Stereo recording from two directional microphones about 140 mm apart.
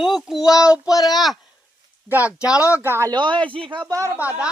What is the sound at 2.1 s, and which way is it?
Speech, 10° right (ahead or behind).